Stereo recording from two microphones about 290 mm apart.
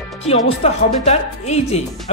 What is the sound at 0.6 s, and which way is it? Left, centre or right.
Speech, left.